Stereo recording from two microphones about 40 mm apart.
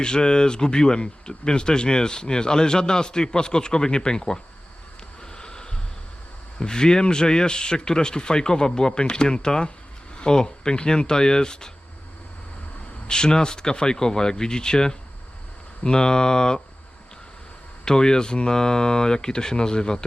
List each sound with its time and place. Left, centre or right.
0.0 s speech: centre
5.3 s a sound: left
6.6 s speech: centre
13.1 s speech: centre
17.8 s speech: centre